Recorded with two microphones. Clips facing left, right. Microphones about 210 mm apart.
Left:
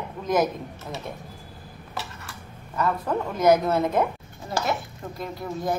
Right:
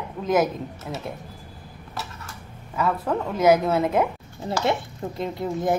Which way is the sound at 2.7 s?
5° right (ahead or behind).